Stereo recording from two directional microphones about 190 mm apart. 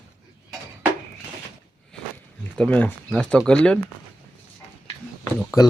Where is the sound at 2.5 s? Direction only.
5° left (ahead or behind).